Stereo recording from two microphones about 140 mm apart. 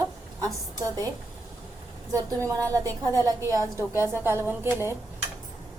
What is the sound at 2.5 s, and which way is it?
A woman's voice, 25° right (ahead or behind).